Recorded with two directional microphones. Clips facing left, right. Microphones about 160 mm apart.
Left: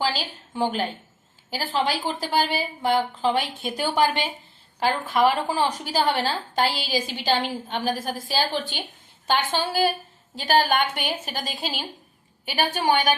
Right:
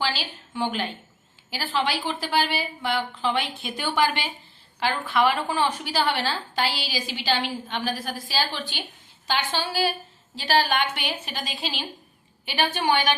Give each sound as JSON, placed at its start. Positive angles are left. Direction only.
{"t": 0.0, "sound": "a woman's voice", "side_deg": 40}